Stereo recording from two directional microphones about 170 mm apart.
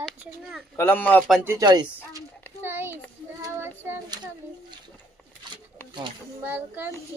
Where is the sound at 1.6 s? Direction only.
25° right (ahead or behind).